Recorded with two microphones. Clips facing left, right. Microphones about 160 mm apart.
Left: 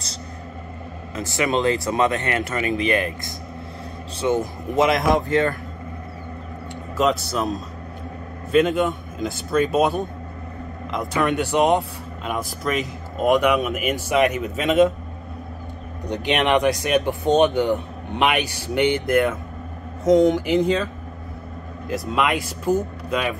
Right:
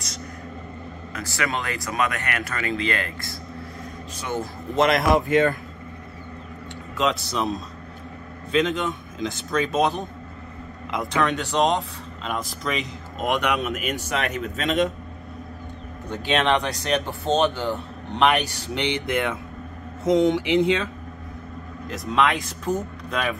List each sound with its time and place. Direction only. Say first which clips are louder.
1.1 s speech: left 6 dB; 20° left (ahead or behind)
4.7 s speech: left 1 dB; centre (ahead or behind)
5.3 s speech: right 1 dB; 20° right (ahead or behind)
7.0 s speech: left 3 dB; centre (ahead or behind)
11.1 s speech: left 3 dB; 10° left (ahead or behind)
16.1 s speech: left 2 dB; 15° left (ahead or behind)